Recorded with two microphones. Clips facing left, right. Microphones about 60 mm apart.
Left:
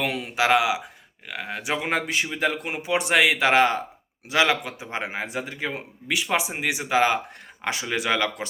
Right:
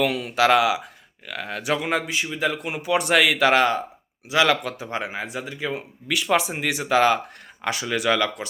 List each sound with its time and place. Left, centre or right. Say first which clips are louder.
0.0 s speech: right 4 dB; left
1.9 s speech: right 1 dB; left
2.9 s speech: right 1 dB; centre
4.4 s speech: right 3 dB; centre
4.9 s speech: left 1 dB; left
6.1 s speech: right 3 dB; centre
7.6 s speech: right 3 dB; left